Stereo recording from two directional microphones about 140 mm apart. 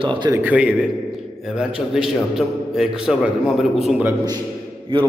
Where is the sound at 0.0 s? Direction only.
35° right (ahead or behind).